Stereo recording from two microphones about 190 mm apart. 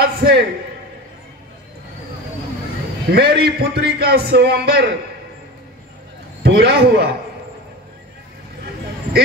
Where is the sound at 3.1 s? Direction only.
55° right (ahead or behind).